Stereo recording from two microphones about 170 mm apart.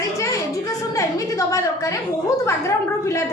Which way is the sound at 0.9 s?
20° left (ahead or behind).